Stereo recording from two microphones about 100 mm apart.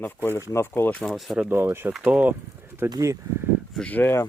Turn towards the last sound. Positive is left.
turn(degrees=20)  # may be behind; listen again after turning